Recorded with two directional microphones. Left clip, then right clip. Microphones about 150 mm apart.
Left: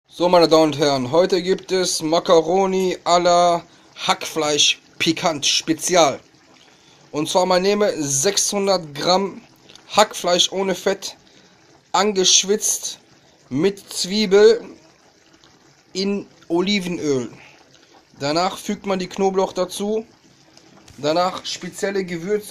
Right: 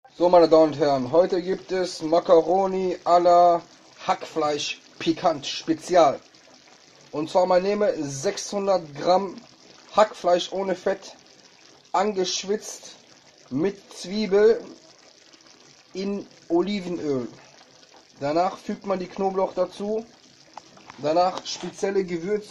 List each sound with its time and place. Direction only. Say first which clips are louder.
0.2 s a man's voice: left 2 dB; 15° left (ahead or behind)
16.0 s a man's voice: left 7 dB; 20° left (ahead or behind)